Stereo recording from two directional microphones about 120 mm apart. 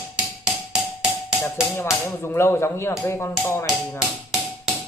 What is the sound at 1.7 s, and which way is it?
Speech, 20° left (ahead or behind).